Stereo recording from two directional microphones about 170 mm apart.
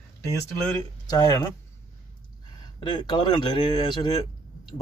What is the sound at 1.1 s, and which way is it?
Speech, 20° left (ahead or behind).